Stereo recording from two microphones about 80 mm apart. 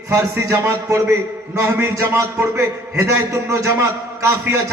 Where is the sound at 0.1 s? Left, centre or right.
Right.